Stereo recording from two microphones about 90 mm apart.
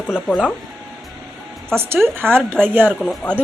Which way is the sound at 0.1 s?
Centre (ahead or behind).